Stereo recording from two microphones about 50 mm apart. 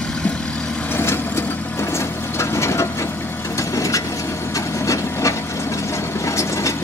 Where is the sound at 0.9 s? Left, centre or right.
Left.